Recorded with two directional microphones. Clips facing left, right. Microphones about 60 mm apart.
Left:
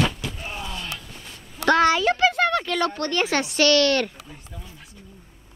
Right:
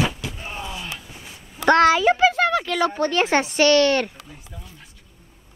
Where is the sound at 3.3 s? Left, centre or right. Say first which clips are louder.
Right 2 dB; right.